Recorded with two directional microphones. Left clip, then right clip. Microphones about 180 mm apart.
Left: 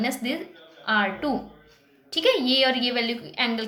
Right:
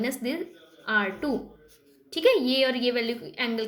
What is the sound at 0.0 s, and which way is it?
A woman's voice, 20° right (ahead or behind).